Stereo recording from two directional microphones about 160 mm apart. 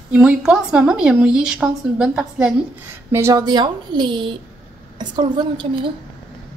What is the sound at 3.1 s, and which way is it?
Speech, 15° right (ahead or behind).